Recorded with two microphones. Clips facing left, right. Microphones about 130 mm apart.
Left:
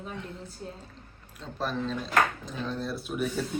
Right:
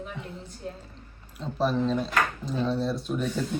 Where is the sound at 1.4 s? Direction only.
Centre (ahead or behind).